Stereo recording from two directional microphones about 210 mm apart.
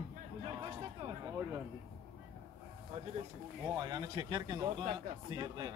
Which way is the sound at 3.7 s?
20° right (ahead or behind).